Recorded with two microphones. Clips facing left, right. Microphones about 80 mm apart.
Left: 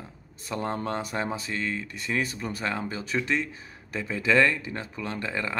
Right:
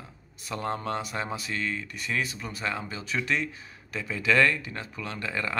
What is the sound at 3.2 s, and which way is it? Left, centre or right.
Speech, left.